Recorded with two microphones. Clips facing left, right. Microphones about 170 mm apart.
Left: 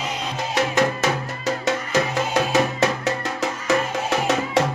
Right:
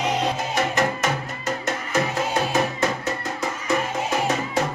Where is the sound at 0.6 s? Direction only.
70° left (ahead or behind).